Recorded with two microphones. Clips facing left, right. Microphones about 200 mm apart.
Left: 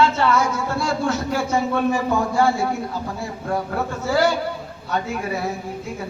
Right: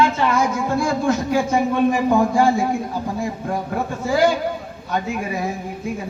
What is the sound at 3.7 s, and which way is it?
Speech, 15° right (ahead or behind).